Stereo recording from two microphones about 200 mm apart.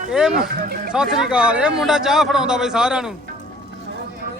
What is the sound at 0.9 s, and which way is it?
A man's voice, 5° right (ahead or behind).